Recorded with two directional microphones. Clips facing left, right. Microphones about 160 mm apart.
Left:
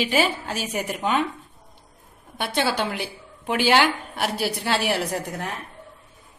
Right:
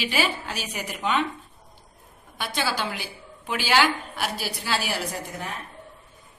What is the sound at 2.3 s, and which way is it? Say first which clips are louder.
A woman's voice: left 4 dB; 60° left (ahead or behind).